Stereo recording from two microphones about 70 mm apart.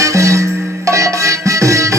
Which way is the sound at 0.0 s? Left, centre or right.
Right.